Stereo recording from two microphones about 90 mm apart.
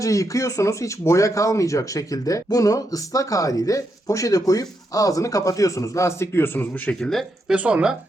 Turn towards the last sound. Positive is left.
turn(degrees=-10)  # may be behind; listen again after turning